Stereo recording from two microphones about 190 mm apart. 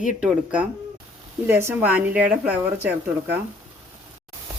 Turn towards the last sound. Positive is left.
turn(degrees=-10)  # may be behind; listen again after turning